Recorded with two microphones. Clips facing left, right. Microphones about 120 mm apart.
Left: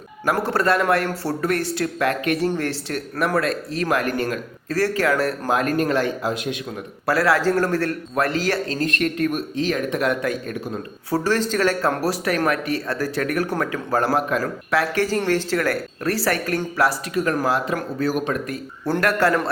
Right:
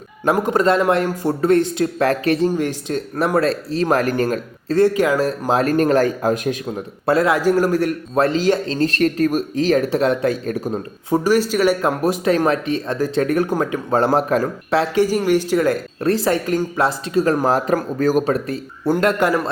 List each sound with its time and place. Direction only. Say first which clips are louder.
0.3 s speech: right 3 dB; 15° right (ahead or behind)
2.0 s speech: right 4 dB; 35° right (ahead or behind)
2.5 s a man's voice: right 4 dB; 15° right (ahead or behind)
3.2 s speech: right 4 dB; 30° right (ahead or behind)
4.8 s a man's voice: right 5 dB; 20° right (ahead or behind)
5.5 s speech: right 6 dB; 35° right (ahead or behind)
7.0 s a man's voice: right 3 dB; 20° right (ahead or behind)
11.1 s speech: right 4 dB; 15° right (ahead or behind)